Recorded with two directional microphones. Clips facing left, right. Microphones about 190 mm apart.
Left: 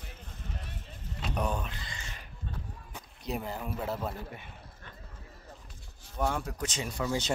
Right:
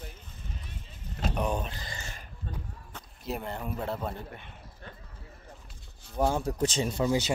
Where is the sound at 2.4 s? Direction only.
45° right (ahead or behind).